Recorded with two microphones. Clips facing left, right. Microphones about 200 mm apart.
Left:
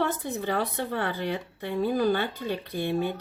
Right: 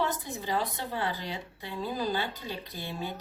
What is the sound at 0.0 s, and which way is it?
Speech, 60° left (ahead or behind).